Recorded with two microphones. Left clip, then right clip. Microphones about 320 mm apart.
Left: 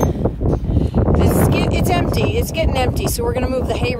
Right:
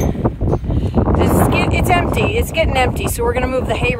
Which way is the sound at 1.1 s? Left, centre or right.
Centre.